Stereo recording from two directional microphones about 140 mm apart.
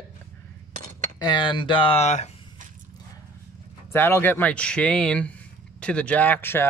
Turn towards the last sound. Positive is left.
turn(degrees=15)  # may be behind; listen again after turning